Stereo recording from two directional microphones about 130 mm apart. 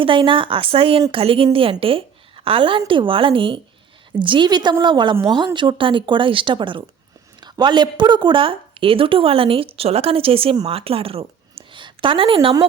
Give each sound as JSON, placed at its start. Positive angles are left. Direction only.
{"t": 0.0, "sound": "a woman's voice", "side_deg": -40}